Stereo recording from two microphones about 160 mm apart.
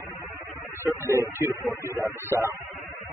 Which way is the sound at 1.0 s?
15° right (ahead or behind).